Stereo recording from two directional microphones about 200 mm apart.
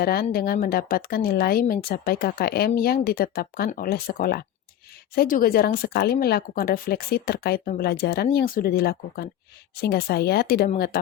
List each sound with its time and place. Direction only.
0.0 s speech: 50° left (ahead or behind)